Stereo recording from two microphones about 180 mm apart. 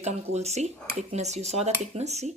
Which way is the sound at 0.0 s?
35° right (ahead or behind).